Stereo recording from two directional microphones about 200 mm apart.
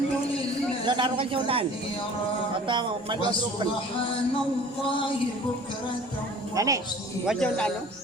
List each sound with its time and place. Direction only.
0.9 s a man's voice: 25° right (ahead or behind)
2.6 s a man's voice: 25° right (ahead or behind)
6.6 s a woman's voice: 15° right (ahead or behind)
7.3 s speech: 5° left (ahead or behind)